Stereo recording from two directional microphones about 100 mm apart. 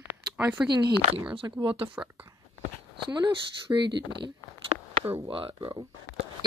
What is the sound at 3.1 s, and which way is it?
Speech, 50° right (ahead or behind).